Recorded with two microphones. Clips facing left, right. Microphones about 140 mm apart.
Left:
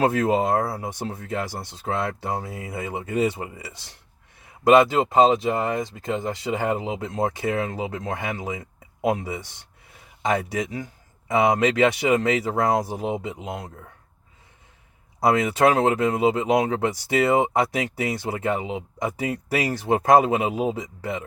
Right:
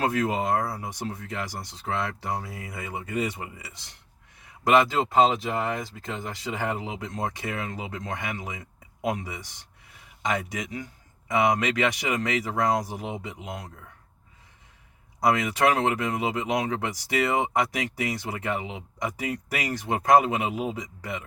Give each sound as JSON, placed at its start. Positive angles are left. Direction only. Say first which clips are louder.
{"t": 0.0, "sound": "speech", "louder": "left 5 dB", "side_deg": 30}
{"t": 15.2, "sound": "speech", "louder": "left 4 dB", "side_deg": 25}